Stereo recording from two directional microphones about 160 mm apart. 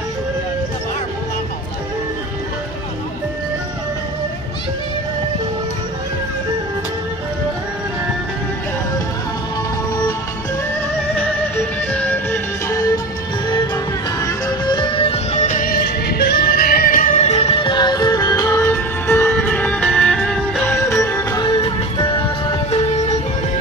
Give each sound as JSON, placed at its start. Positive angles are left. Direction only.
{"t": 11.9, "sound": "music", "side_deg": 10}
{"t": 14.2, "sound": "music", "side_deg": 30}
{"t": 15.4, "sound": "music", "side_deg": 55}
{"t": 21.5, "sound": "music", "side_deg": 30}